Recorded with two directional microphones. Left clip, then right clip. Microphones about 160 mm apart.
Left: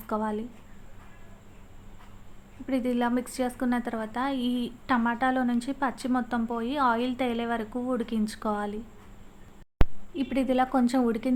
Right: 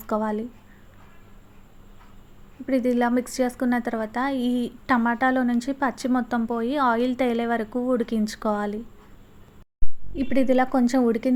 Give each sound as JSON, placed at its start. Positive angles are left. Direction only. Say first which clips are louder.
{"t": 0.1, "sound": "a woman's voice", "louder": "right 4 dB", "side_deg": -25}
{"t": 2.6, "sound": "a woman's voice", "louder": "right 5 dB", "side_deg": -20}
{"t": 10.2, "sound": "a woman's voice", "louder": "right 5 dB", "side_deg": -20}